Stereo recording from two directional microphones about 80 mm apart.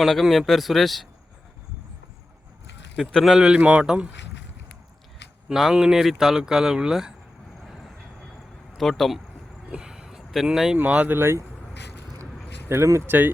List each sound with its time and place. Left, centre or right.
0.0 s speech: centre
3.0 s speech: centre
3.6 s speech: centre
5.5 s speech: centre
7.6 s vehicle: centre
8.8 s speech: centre
9.6 s a sound: centre
10.8 s speech: centre
12.6 s speech: right